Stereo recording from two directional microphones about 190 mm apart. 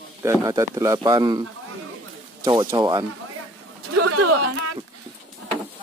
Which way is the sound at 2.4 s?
20° right (ahead or behind).